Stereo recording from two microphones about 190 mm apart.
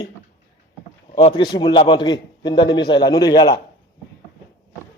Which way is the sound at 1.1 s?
25° left (ahead or behind).